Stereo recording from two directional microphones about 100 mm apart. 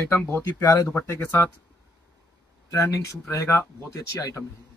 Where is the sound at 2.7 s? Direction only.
30° left (ahead or behind).